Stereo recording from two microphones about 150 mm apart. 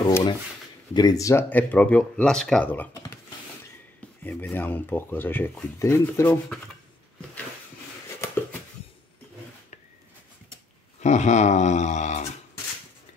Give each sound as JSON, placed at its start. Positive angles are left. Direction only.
{"t": 0.0, "sound": "speech", "side_deg": 25}
{"t": 4.2, "sound": "speech", "side_deg": 10}
{"t": 8.2, "sound": "a sound", "side_deg": 15}
{"t": 11.0, "sound": "speech", "side_deg": 50}